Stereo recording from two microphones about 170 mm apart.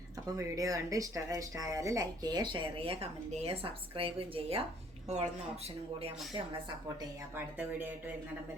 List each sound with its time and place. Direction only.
0.3 s speech: 20° right (ahead or behind); by 5.2 s 40° right (ahead or behind)
7.3 s speech: 10° right (ahead or behind)